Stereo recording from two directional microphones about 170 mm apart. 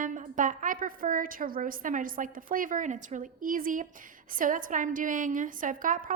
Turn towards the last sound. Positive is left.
turn(degrees=-50)  # may be behind; listen again after turning